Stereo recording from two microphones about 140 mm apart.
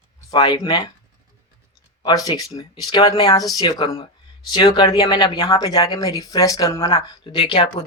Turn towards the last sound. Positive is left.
turn(degrees=40)  # may be behind; listen again after turning